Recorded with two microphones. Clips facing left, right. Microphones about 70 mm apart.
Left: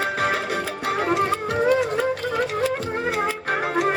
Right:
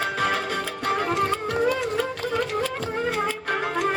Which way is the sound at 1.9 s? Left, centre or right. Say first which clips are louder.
Left 2 dB; centre.